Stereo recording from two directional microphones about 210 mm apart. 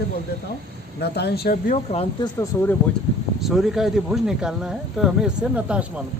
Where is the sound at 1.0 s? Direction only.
50° left (ahead or behind).